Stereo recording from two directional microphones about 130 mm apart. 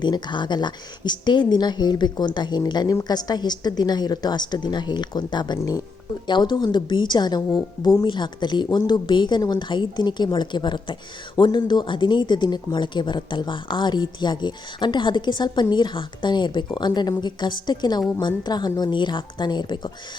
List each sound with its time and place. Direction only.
0.0 s a woman's voice: 35° left (ahead or behind)